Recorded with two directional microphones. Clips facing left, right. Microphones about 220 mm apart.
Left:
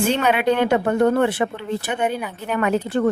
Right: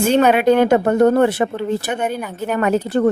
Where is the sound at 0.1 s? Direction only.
45° right (ahead or behind).